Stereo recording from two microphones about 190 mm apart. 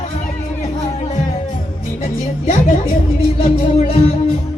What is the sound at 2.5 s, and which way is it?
Music, 40° left (ahead or behind).